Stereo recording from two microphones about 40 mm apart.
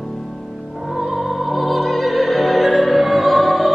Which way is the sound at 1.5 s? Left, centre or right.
Centre.